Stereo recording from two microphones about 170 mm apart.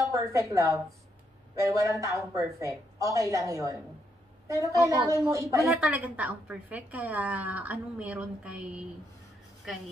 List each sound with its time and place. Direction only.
0.1 s a woman's voice: 20° right (ahead or behind)
5.7 s a woman's voice: 5° right (ahead or behind)